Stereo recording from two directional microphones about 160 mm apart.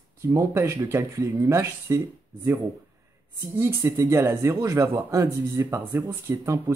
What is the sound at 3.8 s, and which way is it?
Speech, 20° right (ahead or behind).